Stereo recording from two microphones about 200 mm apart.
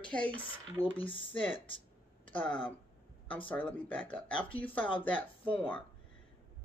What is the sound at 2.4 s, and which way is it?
A woman's voice, 5° left (ahead or behind).